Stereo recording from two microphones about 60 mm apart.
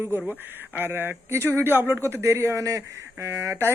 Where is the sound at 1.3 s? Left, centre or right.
Right.